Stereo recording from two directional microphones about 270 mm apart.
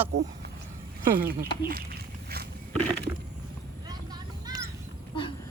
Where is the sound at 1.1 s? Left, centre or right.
Right.